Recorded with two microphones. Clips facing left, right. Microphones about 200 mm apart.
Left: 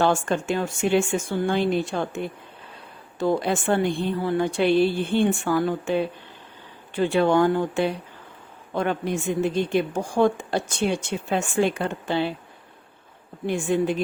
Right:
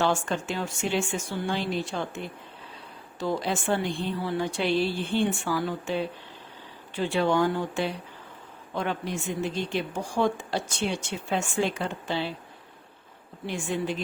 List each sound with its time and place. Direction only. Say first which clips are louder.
0.0 s a woman's voice: left 4 dB; 55° left (ahead or behind)
13.5 s a woman's voice: left 7 dB; 50° left (ahead or behind)